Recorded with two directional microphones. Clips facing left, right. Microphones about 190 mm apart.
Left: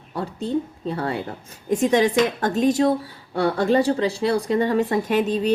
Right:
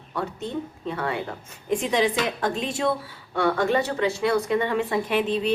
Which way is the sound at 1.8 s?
45° left (ahead or behind).